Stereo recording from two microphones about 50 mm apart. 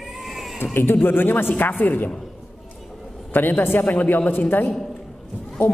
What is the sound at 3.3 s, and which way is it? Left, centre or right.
A man's voice, left.